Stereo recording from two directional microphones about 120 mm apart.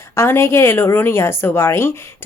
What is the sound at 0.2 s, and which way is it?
A woman's voice, 20° left (ahead or behind).